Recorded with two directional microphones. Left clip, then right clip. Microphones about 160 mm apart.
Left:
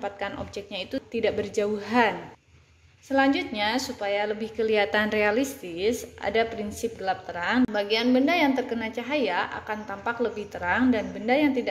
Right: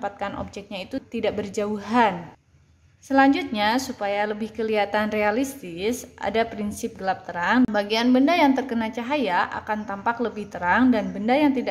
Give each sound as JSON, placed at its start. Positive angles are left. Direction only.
{"t": 0.0, "sound": "a woman's voice", "side_deg": -15}
{"t": 3.1, "sound": "a woman's voice", "side_deg": -25}